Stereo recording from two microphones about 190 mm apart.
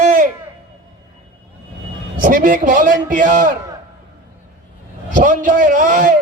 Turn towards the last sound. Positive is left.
turn(degrees=-45)  # may be behind; listen again after turning